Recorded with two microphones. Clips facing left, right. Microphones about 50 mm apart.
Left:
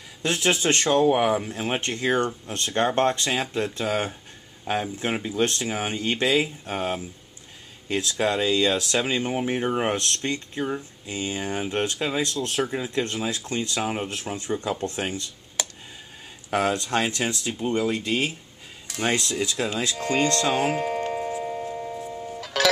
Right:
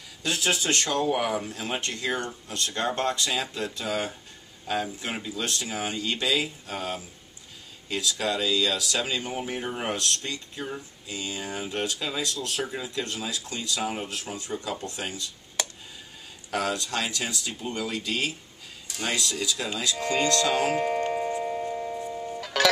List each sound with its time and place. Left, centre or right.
0.2 s speech: left
15.6 s a sound: centre
16.4 s speech: left
20.7 s music: centre